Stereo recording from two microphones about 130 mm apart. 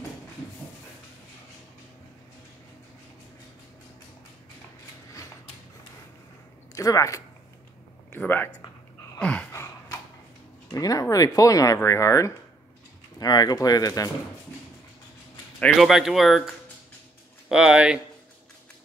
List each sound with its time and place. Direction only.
6.7 s speech: 25° left (ahead or behind)
9.2 s a sound: 10° left (ahead or behind)
9.5 s gasp: 20° left (ahead or behind)
10.7 s speech: 25° left (ahead or behind)
15.6 s speech: centre (ahead or behind)
17.5 s speech: 5° right (ahead or behind)